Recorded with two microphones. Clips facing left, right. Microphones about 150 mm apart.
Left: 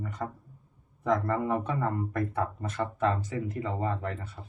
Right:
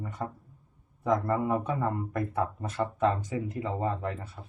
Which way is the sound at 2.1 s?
25° right (ahead or behind).